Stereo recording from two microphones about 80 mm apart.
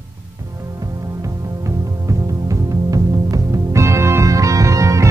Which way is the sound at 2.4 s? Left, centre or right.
Right.